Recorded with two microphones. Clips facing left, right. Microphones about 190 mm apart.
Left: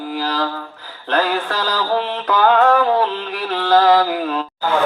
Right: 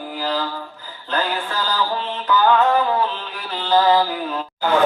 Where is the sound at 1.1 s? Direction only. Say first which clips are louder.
Left 5 dB; 75° left (ahead or behind).